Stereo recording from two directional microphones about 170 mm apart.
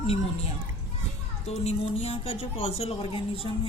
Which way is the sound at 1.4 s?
40° left (ahead or behind).